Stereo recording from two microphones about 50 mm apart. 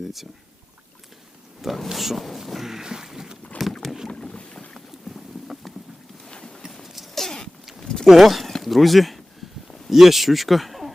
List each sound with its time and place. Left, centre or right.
1.6 s speech: centre
3.8 s boat: centre
4.1 s boat: centre
4.9 s boat: centre
6.2 s a sound: centre
6.8 s a sound: centre
8.0 s speech: centre